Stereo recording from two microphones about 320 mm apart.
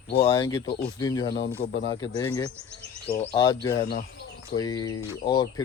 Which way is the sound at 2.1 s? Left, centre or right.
Centre.